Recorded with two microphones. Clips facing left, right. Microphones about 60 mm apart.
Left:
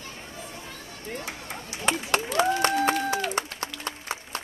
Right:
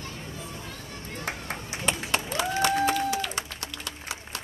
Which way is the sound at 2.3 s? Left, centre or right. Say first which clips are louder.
Left 2 dB; left.